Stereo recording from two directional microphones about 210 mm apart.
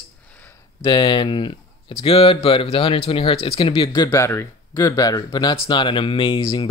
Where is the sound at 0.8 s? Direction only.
25° left (ahead or behind).